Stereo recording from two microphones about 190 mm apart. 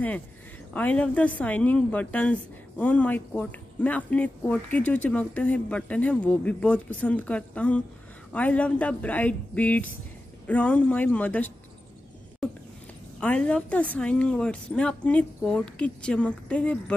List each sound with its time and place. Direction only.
0.7 s speech: 5° left (ahead or behind)
13.2 s speech: 5° left (ahead or behind)